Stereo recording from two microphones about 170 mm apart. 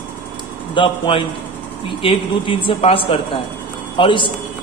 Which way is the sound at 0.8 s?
30° left (ahead or behind).